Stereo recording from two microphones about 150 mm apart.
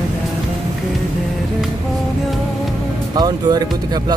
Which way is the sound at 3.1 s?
25° right (ahead or behind).